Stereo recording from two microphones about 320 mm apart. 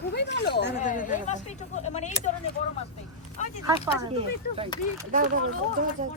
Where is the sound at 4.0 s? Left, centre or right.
Centre.